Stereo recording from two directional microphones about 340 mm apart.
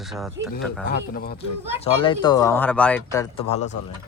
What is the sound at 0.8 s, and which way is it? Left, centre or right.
Speech, left.